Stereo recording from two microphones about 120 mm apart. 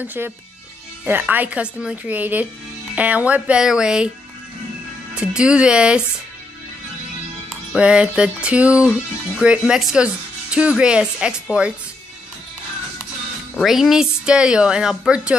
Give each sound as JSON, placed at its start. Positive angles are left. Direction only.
{"t": 0.0, "sound": "speech", "side_deg": -15}
{"t": 5.1, "sound": "speech", "side_deg": -5}
{"t": 7.7, "sound": "speech", "side_deg": -10}
{"t": 13.6, "sound": "speech", "side_deg": 0}